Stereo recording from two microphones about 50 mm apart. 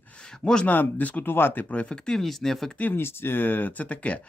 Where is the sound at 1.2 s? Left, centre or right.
Left.